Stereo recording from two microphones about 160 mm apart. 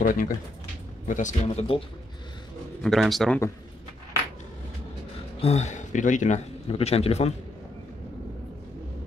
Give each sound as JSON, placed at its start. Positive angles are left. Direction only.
{"t": 0.0, "sound": "speech", "side_deg": 55}
{"t": 2.8, "sound": "speech", "side_deg": 0}
{"t": 5.4, "sound": "speech", "side_deg": 45}